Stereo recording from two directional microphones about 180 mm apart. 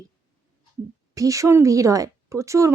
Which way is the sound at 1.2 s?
20° right (ahead or behind).